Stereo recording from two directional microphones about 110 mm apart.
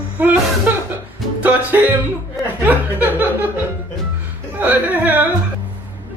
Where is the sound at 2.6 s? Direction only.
15° right (ahead or behind).